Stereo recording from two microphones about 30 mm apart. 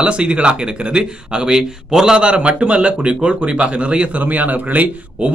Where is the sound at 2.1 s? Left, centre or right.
Right.